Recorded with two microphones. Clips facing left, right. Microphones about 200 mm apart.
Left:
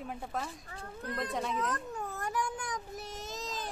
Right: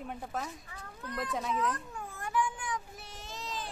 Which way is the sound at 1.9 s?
40° left (ahead or behind).